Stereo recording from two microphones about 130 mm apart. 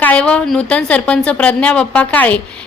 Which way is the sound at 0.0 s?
10° left (ahead or behind).